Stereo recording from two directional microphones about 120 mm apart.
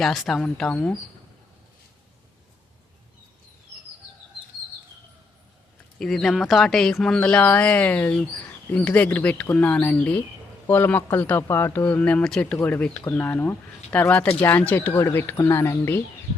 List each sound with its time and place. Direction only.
0.0 s speech: centre (ahead or behind)
6.0 s speech: 5° left (ahead or behind); by 16.0 s 25° left (ahead or behind)